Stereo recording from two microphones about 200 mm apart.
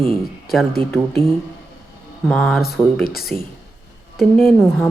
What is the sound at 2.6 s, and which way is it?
Speech, 50° left (ahead or behind).